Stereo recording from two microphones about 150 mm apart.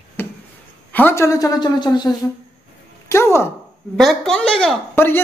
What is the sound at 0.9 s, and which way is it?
A woman's voice, 15° left (ahead or behind).